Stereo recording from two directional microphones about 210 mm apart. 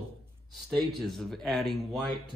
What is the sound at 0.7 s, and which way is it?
Speech, centre (ahead or behind).